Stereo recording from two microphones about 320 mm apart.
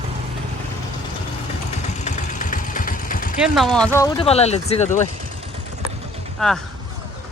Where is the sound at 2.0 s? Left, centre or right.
Left.